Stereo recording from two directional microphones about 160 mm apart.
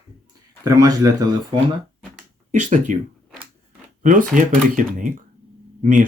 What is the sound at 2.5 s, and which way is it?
Speech, 50° right (ahead or behind).